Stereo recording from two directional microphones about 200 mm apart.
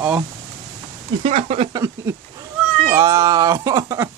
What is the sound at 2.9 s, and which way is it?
Speech, 15° right (ahead or behind).